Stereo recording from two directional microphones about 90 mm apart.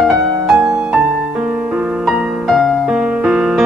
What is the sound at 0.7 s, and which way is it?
Music, 15° right (ahead or behind).